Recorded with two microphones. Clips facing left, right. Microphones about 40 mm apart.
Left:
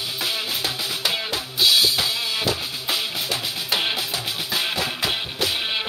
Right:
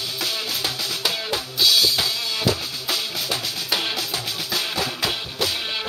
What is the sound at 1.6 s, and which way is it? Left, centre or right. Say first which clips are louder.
Drum kit: left 1 dB; centre.